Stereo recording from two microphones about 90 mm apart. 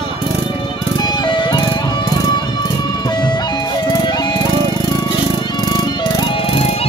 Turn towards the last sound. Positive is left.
turn(degrees=90)